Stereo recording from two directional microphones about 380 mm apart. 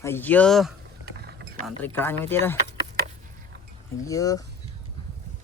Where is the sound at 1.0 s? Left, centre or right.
Right.